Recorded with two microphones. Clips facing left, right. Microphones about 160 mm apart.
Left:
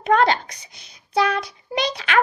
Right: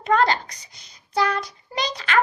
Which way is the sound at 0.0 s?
65° left (ahead or behind).